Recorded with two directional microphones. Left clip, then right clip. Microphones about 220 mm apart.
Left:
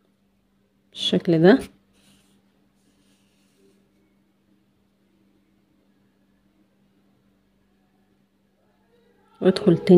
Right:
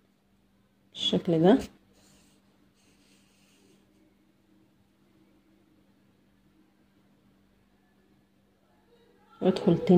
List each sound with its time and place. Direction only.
0.9 s speech: 30° left (ahead or behind)
9.4 s speech: 30° left (ahead or behind)